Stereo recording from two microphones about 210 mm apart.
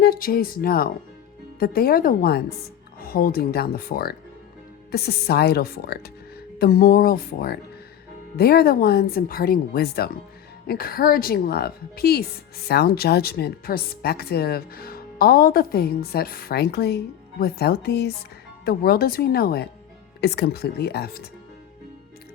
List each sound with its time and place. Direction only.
0.0 s speech: 45° left (ahead or behind)